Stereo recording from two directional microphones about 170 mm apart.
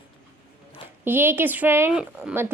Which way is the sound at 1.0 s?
15° right (ahead or behind).